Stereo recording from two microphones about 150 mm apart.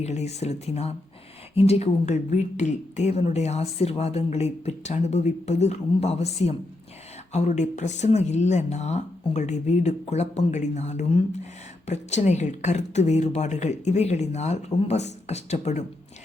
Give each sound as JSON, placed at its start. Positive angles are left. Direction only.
{"t": 0.0, "sound": "speech", "side_deg": 45}